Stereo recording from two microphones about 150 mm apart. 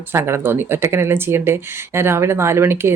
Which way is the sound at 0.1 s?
15° right (ahead or behind).